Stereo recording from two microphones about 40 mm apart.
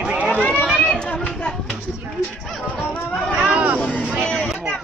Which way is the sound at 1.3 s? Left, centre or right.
Left.